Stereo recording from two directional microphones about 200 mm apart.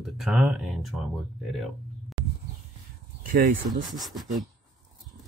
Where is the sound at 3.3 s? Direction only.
40° right (ahead or behind).